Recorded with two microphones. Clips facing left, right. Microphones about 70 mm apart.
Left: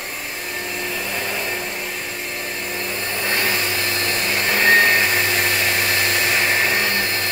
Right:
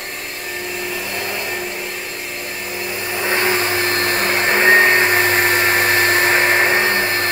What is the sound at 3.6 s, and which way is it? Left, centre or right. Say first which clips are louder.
Vacuum cleaner: right 5 dB; right.